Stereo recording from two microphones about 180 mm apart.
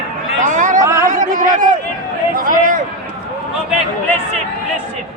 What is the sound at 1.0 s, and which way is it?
A man's voice, 45° right (ahead or behind).